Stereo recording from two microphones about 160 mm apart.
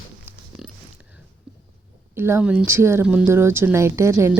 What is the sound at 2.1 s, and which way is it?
Speech, 15° right (ahead or behind).